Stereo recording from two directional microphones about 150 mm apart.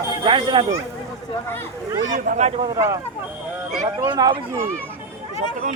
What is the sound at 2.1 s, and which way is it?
Speech, 50° right (ahead or behind).